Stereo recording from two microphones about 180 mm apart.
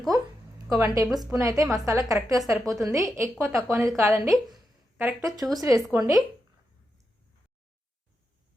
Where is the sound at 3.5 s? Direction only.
Centre (ahead or behind).